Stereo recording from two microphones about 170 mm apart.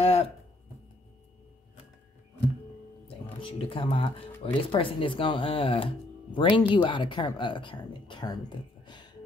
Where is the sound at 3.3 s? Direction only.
30° left (ahead or behind).